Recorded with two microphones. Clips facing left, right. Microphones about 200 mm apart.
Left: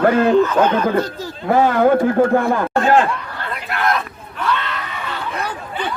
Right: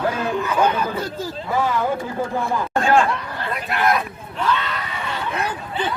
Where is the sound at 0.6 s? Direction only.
10° right (ahead or behind).